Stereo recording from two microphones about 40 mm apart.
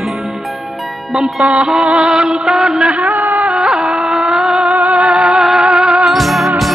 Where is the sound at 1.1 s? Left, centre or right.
Centre.